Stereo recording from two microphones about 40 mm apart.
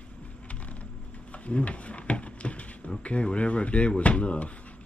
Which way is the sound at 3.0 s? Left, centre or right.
Left.